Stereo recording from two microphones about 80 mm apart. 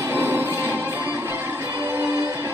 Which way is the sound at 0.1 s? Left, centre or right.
Right.